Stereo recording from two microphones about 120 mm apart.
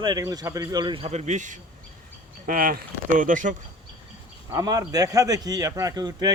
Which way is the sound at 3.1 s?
90° right.